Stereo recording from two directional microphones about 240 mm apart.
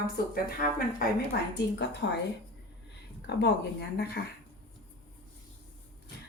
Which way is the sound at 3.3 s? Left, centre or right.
Left.